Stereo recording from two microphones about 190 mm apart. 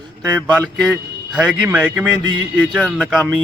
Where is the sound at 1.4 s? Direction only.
5° right (ahead or behind).